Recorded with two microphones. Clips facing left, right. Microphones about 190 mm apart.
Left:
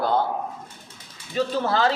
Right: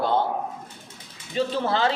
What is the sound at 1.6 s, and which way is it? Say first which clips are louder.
Speech: left 2 dB; 25° right (ahead or behind).